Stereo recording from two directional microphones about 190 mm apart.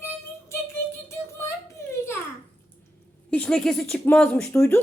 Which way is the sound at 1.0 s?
15° left (ahead or behind).